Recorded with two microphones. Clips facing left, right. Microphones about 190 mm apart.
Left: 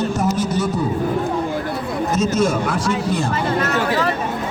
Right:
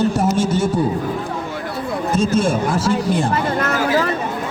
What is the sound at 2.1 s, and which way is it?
Speech, 30° right (ahead or behind).